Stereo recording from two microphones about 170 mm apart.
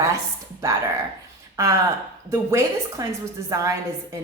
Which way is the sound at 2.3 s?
15° right (ahead or behind).